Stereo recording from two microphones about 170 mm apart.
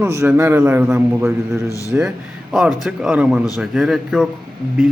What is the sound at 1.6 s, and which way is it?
Speech, 20° left (ahead or behind).